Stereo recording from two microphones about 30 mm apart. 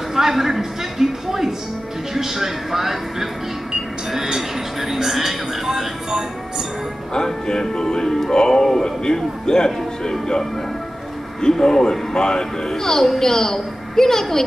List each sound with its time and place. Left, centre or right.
0.1 s a sound: centre
4.4 s music: centre
7.2 s music: left
11.5 s a man's voice: centre